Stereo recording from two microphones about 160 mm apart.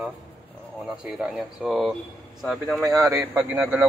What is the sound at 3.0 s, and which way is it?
Speech, 20° right (ahead or behind).